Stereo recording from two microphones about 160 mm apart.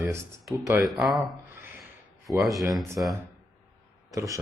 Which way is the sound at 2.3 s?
Centre (ahead or behind).